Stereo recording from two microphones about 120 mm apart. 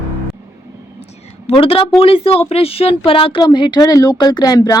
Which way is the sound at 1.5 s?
50° left (ahead or behind).